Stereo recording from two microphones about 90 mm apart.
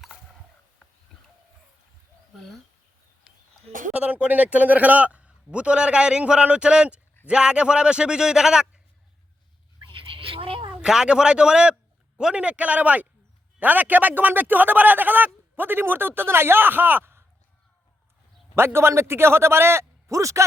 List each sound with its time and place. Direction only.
2.3 s bird: centre (ahead or behind)
3.3 s a sound: 10° right (ahead or behind)
3.9 s a man's voice: 15° right (ahead or behind)
9.8 s a sound: 70° right (ahead or behind)
10.8 s a man's voice: 5° right (ahead or behind); by 17.2 s 25° right (ahead or behind)
18.5 s a man's voice: 25° right (ahead or behind)